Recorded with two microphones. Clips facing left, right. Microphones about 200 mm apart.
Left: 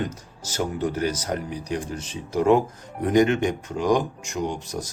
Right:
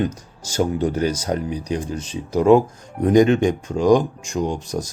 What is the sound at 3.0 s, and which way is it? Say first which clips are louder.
Speech: right 5 dB; 25° right (ahead or behind).